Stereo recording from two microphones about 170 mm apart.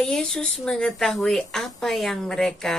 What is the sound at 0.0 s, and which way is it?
Speech, 5° left (ahead or behind).